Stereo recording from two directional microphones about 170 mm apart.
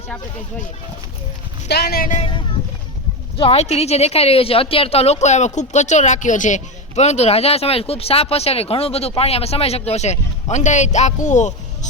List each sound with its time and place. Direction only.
1.6 s speech: 75° left (ahead or behind)
2.1 s a woman's voice: 30° left (ahead or behind)